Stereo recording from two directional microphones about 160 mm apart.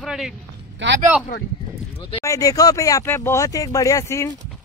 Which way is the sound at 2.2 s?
20° left (ahead or behind).